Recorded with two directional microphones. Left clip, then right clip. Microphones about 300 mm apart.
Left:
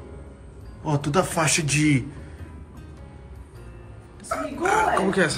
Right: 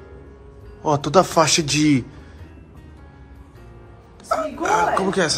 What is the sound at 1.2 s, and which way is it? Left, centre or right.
Speech, right.